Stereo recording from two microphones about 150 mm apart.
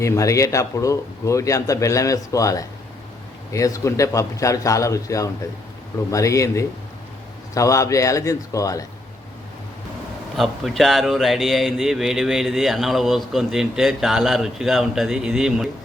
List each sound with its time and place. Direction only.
0.0 s speech: 20° left (ahead or behind)
10.3 s speech: centre (ahead or behind)